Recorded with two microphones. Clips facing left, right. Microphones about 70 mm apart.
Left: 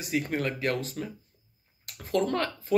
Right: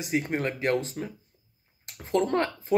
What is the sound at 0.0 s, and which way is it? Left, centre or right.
Speech, right.